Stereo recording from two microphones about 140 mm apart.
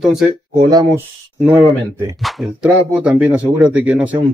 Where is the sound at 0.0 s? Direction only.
5° right (ahead or behind).